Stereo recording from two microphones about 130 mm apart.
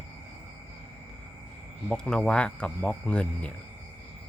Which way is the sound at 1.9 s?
5° left (ahead or behind).